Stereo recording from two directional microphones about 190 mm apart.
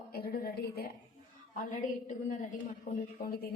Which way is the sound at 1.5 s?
40° left (ahead or behind).